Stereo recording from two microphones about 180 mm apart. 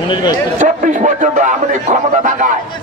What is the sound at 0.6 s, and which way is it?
Speech, 45° right (ahead or behind).